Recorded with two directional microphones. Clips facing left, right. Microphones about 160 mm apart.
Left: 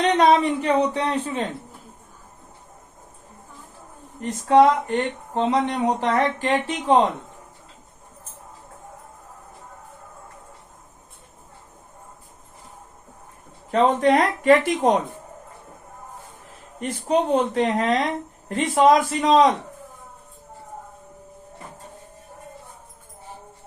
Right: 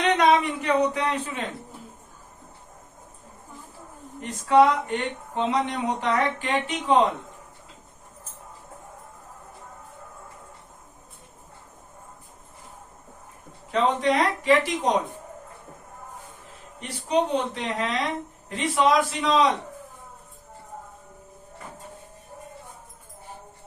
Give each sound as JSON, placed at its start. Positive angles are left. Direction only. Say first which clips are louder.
{"t": 0.0, "sound": "speech", "louder": "left 3 dB", "side_deg": 30}
{"t": 4.2, "sound": "speech", "louder": "left 3 dB", "side_deg": 40}
{"t": 13.7, "sound": "speech", "louder": "left 5 dB", "side_deg": 45}
{"t": 16.8, "sound": "speech", "louder": "left 3 dB", "side_deg": 50}